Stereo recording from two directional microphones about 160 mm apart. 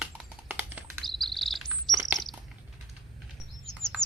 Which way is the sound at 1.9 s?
15° right (ahead or behind).